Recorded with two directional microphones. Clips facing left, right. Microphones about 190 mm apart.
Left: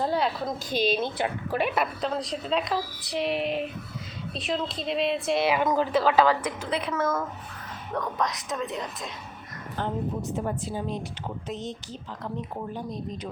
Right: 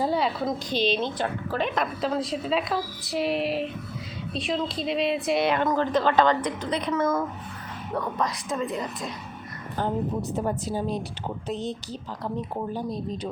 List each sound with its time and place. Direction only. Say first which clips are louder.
0.0 s a woman's voice: right 1 dB; centre (ahead or behind)
7.9 s a woman's voice: right 1 dB; 5° right (ahead or behind)
9.7 s a woman's voice: right 3 dB; 35° right (ahead or behind)